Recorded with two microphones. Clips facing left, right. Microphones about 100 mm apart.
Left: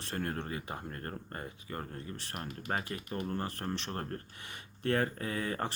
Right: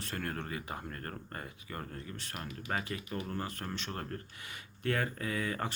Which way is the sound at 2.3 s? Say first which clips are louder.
Left 1 dB; 45° left (ahead or behind).